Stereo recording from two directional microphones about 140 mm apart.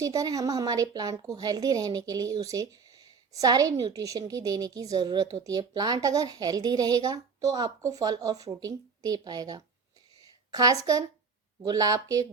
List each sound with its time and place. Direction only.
0.0 s a woman's voice: 25° right (ahead or behind)
10.2 s a sound: 25° right (ahead or behind)
11.6 s a woman's voice: 25° right (ahead or behind)